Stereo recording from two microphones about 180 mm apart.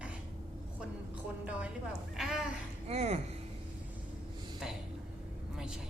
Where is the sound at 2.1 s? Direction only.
Centre (ahead or behind).